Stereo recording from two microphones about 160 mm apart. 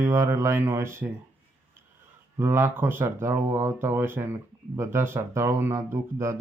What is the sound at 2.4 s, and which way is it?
Speech, 15° right (ahead or behind).